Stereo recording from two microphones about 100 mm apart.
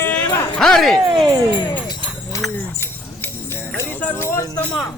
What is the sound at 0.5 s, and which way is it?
Speech, 5° left (ahead or behind).